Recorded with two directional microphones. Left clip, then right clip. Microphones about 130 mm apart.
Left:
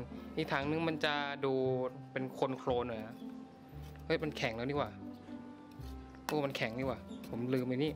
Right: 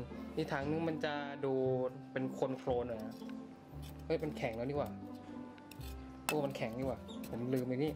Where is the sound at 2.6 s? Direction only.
30° left (ahead or behind).